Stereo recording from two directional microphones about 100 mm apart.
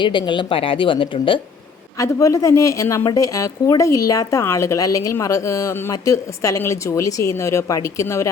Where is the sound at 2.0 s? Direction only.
35° left (ahead or behind).